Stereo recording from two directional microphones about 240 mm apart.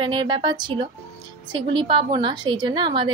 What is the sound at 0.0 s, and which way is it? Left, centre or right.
Speech, centre.